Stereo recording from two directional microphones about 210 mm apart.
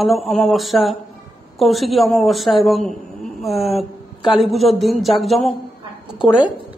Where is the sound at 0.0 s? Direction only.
Centre (ahead or behind).